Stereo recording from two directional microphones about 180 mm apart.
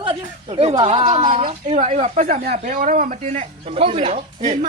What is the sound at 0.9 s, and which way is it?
Speech, 35° right (ahead or behind).